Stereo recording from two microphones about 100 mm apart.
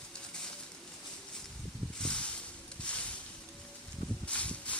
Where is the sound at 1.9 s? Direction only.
10° left (ahead or behind).